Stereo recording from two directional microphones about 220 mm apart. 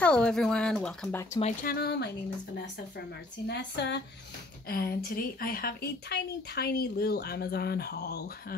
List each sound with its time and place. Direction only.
0.0 s speech: 5° left (ahead or behind)
1.4 s speech: 40° left (ahead or behind)
3.4 s speech: 50° left (ahead or behind)